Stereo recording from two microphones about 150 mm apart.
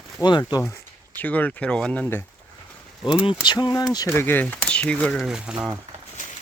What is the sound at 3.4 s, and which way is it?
Speech, 30° left (ahead or behind).